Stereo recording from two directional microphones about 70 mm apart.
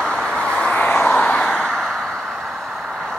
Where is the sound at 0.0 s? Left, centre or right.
Centre.